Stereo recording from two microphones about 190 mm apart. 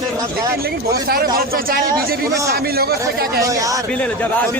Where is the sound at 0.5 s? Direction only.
55° right (ahead or behind).